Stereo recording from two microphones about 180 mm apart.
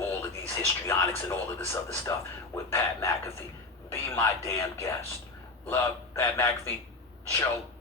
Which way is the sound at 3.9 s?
15° left (ahead or behind).